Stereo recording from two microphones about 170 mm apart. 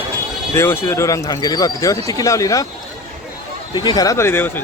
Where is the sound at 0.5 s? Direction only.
15° left (ahead or behind).